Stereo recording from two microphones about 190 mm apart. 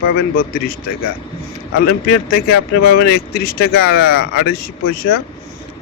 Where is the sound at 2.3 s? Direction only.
55° left (ahead or behind).